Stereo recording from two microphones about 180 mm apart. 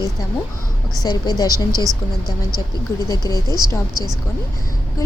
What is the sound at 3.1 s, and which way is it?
Speech, 20° left (ahead or behind).